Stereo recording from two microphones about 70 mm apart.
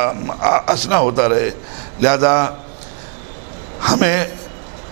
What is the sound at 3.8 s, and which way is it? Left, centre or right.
Speech, centre.